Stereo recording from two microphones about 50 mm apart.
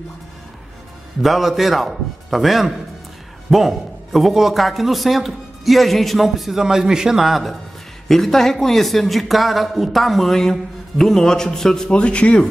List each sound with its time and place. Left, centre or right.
1.2 s a man's voice: centre
8.1 s speech: centre
11.9 s speech: left